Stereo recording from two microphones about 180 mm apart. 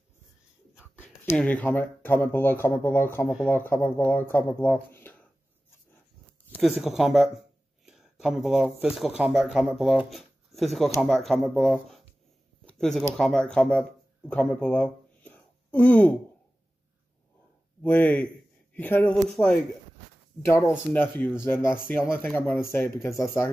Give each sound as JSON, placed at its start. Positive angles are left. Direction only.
{"t": 0.7, "sound": "a sound", "side_deg": -5}
{"t": 1.3, "sound": "speech", "side_deg": 10}
{"t": 6.6, "sound": "speech", "side_deg": 0}
{"t": 12.6, "sound": "a sound", "side_deg": 5}
{"t": 13.2, "sound": "speech", "side_deg": 5}
{"t": 17.8, "sound": "a man's voice", "side_deg": 10}
{"t": 20.4, "sound": "speech", "side_deg": 15}